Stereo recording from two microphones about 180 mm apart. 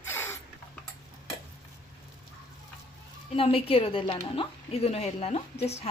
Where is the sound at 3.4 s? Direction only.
30° left (ahead or behind).